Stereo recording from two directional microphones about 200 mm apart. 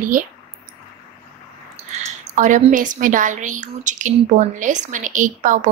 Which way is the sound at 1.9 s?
35° right (ahead or behind).